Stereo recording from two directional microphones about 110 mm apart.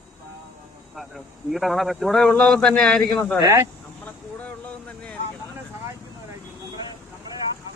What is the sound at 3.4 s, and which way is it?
Speech, 30° right (ahead or behind).